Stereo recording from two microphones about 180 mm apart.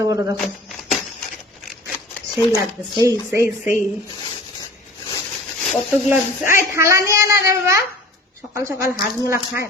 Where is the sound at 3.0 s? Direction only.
15° right (ahead or behind).